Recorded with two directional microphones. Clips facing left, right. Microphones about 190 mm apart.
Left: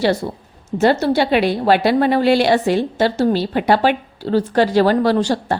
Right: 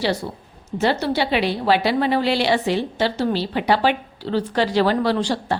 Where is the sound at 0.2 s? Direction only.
50° left (ahead or behind).